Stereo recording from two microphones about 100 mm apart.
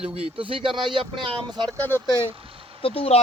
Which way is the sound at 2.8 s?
80° left.